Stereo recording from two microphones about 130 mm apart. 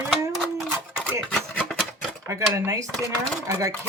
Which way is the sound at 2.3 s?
20° right (ahead or behind).